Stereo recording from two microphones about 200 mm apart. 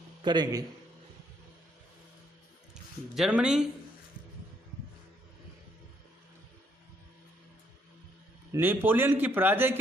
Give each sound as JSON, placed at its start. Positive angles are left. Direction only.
{"t": 0.2, "sound": "a man's voice", "side_deg": -20}
{"t": 2.7, "sound": "speech", "side_deg": -5}
{"t": 8.5, "sound": "speech", "side_deg": -10}